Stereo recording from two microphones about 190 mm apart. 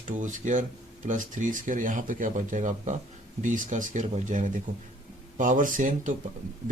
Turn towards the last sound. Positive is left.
turn(degrees=-45)  # may be behind; listen again after turning